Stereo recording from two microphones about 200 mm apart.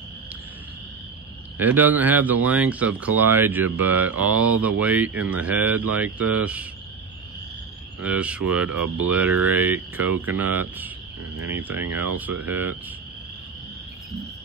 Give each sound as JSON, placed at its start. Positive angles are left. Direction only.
{"t": 1.6, "sound": "speech", "side_deg": -10}
{"t": 8.0, "sound": "speech", "side_deg": -5}
{"t": 11.7, "sound": "speech", "side_deg": -90}
{"t": 12.2, "sound": "speech", "side_deg": -10}